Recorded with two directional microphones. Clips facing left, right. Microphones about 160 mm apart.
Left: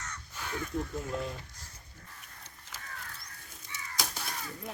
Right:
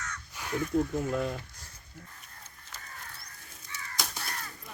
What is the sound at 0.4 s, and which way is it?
Crow, 10° right (ahead or behind).